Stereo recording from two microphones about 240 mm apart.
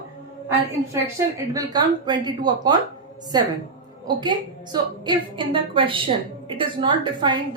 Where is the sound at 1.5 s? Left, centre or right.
Centre.